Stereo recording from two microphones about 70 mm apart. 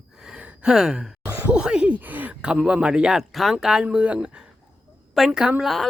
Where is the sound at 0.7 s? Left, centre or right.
Centre.